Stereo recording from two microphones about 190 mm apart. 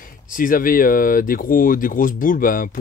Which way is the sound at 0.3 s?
45° left (ahead or behind).